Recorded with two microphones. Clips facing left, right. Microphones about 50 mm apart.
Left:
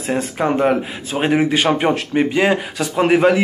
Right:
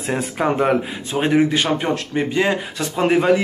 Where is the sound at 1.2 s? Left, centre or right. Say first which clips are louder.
Left 1 dB; centre.